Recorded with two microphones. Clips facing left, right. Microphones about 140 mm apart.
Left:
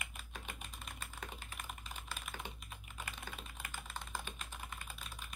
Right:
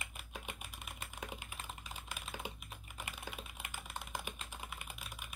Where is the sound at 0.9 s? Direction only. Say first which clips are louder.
Right 3 dB; 10° right (ahead or behind).